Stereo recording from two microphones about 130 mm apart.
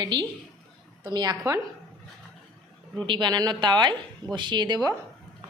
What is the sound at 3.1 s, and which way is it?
A woman's voice, 35° right (ahead or behind).